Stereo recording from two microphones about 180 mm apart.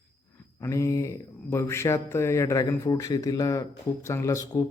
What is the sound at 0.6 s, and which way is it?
A man's voice, 15° left (ahead or behind).